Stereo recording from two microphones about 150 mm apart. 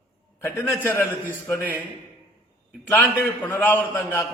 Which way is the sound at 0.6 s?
15° left (ahead or behind).